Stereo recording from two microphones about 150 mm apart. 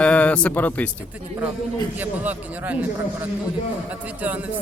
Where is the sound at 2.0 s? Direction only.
10° right (ahead or behind).